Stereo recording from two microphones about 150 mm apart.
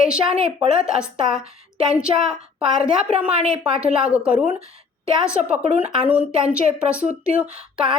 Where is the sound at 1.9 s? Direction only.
5° right (ahead or behind).